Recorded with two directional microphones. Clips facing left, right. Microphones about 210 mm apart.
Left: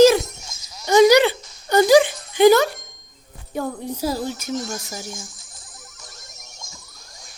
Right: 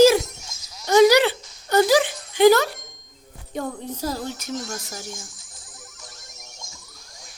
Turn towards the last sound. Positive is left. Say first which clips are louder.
# even
turn(degrees=40)  # may be behind; listen again after turning